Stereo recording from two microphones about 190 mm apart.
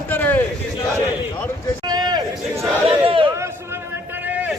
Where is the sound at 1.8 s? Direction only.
20° right (ahead or behind).